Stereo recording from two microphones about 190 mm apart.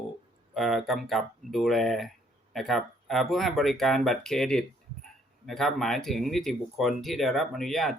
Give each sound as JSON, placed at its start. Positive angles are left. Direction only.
{"t": 0.5, "sound": "speech", "side_deg": 0}